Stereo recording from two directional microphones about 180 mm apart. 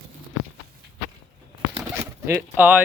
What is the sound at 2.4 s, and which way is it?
Speech, 10° right (ahead or behind).